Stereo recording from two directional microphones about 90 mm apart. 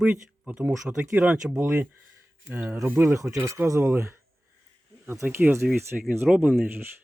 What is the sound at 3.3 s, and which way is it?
Speech, 35° right (ahead or behind).